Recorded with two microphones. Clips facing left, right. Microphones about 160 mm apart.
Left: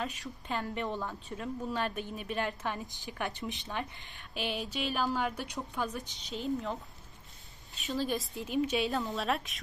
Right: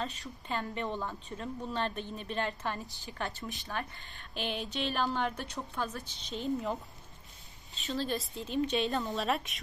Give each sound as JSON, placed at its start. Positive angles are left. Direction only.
{"t": 0.5, "sound": "a woman's voice", "side_deg": 5}
{"t": 4.3, "sound": "a woman's voice", "side_deg": 5}
{"t": 6.3, "sound": "speech", "side_deg": 0}
{"t": 7.8, "sound": "a woman's voice", "side_deg": 15}
{"t": 8.5, "sound": "speech", "side_deg": 5}